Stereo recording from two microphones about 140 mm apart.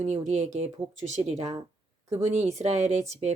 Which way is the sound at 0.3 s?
55° right (ahead or behind).